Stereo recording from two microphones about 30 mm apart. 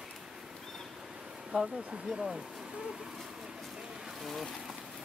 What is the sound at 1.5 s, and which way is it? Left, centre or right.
Speech, right.